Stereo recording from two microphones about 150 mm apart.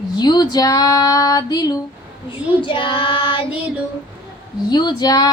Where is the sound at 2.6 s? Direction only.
35° left (ahead or behind).